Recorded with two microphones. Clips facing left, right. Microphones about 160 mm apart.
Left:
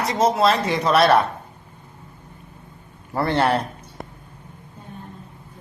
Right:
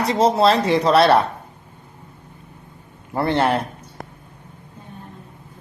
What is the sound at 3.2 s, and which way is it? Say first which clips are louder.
Speech: right 1 dB; 20° right (ahead or behind).